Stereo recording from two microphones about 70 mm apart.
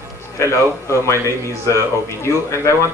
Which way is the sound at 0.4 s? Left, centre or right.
Left.